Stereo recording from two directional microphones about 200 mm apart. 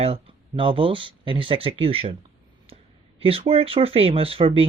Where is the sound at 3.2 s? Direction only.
30° right (ahead or behind).